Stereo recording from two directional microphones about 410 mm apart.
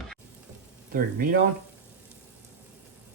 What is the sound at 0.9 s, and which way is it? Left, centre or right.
Speech, right.